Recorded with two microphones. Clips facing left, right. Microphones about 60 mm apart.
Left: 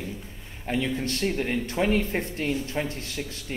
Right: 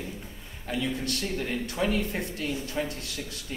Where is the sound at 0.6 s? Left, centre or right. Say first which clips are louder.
Left 3 dB; left.